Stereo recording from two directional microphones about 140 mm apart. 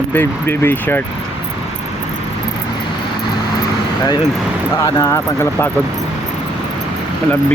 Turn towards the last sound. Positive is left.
turn(degrees=20)  # may be behind; listen again after turning